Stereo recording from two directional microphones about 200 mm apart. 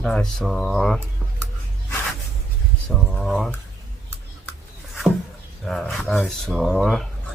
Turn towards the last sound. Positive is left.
turn(degrees=0)  # may be behind; listen again after turning